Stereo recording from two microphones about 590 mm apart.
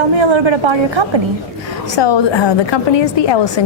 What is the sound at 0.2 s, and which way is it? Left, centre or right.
Speech, right.